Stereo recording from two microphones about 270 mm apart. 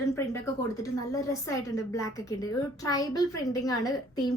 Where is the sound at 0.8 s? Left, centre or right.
Centre.